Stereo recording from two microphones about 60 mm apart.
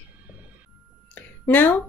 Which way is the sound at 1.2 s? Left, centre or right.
Left.